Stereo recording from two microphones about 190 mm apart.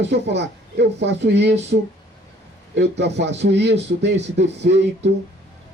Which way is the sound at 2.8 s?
65° right (ahead or behind).